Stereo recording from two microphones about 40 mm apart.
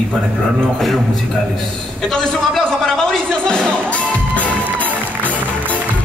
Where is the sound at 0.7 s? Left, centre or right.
Centre.